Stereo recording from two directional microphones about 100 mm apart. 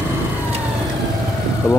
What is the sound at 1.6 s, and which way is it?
Speech, 25° left (ahead or behind).